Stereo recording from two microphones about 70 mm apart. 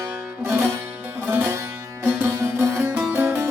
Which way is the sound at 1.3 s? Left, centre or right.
Right.